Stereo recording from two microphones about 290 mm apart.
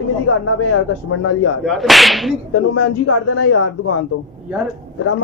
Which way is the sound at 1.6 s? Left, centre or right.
Centre.